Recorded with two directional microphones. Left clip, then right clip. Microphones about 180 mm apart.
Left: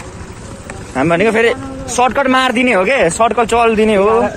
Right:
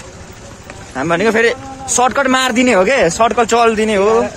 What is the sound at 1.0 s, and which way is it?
A man's voice, 15° right (ahead or behind).